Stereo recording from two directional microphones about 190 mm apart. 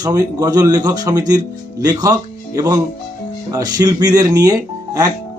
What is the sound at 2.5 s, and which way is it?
Speech, 20° right (ahead or behind).